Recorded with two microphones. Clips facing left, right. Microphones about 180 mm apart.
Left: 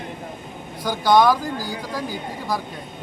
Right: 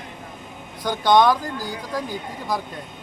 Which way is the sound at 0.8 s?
5° left (ahead or behind).